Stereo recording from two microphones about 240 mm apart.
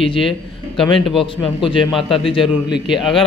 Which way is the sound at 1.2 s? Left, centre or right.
Left.